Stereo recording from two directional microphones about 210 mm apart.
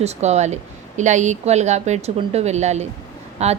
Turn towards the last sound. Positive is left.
turn(degrees=-30)  # may be behind; listen again after turning